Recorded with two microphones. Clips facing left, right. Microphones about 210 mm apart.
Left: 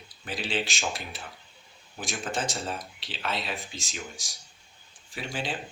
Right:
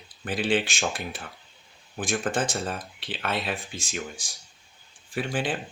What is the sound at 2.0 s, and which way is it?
Speech, 55° right (ahead or behind).